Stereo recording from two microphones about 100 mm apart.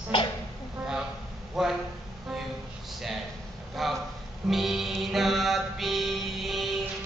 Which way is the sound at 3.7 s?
Centre (ahead or behind).